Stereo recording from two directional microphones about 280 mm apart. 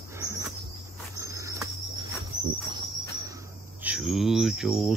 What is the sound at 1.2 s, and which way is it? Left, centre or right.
Cricket, centre.